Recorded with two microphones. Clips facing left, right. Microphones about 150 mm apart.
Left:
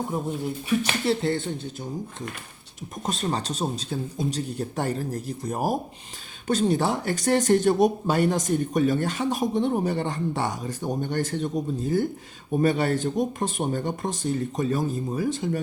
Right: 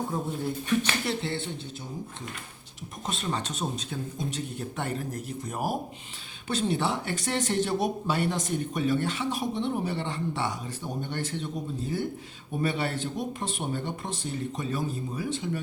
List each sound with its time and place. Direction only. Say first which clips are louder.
0.1 s speech: left 2 dB; 10° left (ahead or behind)
1.0 s speech: left 7 dB; 40° left (ahead or behind)
3.1 s speech: left 4 dB; 40° left (ahead or behind)